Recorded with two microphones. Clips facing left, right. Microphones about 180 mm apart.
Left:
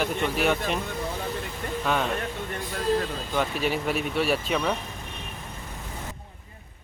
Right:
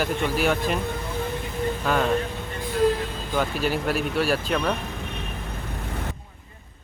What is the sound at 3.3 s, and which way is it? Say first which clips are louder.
Speech: right 2 dB; centre (ahead or behind).